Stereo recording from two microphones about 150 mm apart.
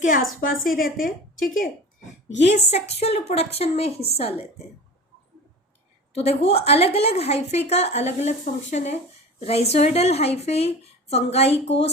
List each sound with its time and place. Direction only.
0.0 s a woman's voice: 65° left (ahead or behind)
2.4 s a woman's voice: 50° left (ahead or behind)
6.1 s a woman's voice: 45° left (ahead or behind)